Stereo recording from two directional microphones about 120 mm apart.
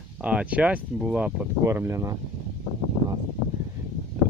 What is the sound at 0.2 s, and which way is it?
Speech, 10° right (ahead or behind).